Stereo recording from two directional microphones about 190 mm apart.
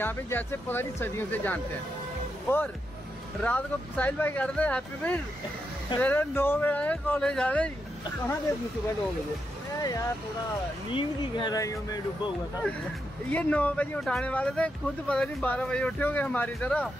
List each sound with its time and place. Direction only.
0.0 s speech: 10° left (ahead or behind)
9.8 s speech: 20° left (ahead or behind)
13.3 s speech: 5° left (ahead or behind)